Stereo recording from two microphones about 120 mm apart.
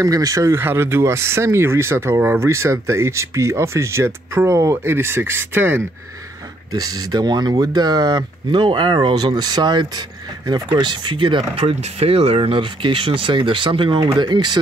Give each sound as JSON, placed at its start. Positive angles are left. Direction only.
{"t": 0.0, "sound": "speech", "side_deg": -30}
{"t": 6.7, "sound": "speech", "side_deg": -30}